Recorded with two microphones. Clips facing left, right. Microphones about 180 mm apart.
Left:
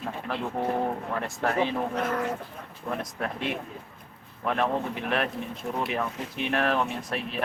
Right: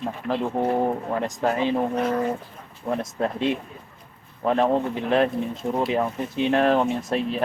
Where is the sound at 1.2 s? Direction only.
20° right (ahead or behind).